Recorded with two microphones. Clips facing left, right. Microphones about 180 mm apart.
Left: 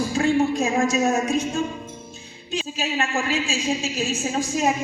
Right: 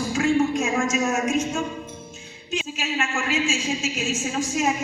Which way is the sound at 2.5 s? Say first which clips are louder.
Left 1 dB; 35° left (ahead or behind).